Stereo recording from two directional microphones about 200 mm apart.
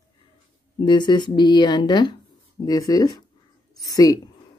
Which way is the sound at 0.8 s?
20° left (ahead or behind).